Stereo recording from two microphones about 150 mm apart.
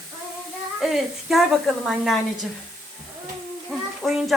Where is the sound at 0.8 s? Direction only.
Centre (ahead or behind).